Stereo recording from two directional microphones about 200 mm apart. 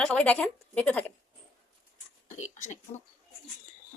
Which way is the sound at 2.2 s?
35° left (ahead or behind).